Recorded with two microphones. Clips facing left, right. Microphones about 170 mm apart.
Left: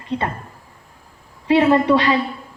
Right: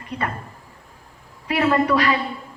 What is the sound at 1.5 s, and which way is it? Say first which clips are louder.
Speech: left 5 dB; 25° left (ahead or behind).